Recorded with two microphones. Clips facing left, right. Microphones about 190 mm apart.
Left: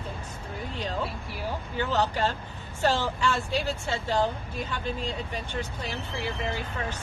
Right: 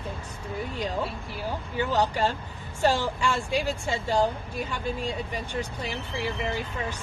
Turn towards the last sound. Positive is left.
turn(degrees=-10)  # may be behind; listen again after turning